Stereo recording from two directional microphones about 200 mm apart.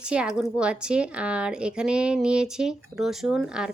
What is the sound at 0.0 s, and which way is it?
Speech, 5° right (ahead or behind).